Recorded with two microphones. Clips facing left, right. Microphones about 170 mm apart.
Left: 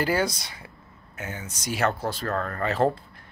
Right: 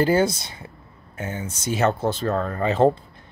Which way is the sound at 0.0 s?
25° right (ahead or behind).